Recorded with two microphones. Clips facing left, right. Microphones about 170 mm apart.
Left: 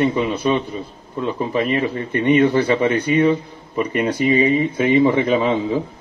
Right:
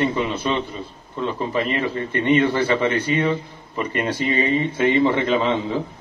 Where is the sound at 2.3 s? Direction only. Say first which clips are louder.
Left 3 dB; 15° left (ahead or behind).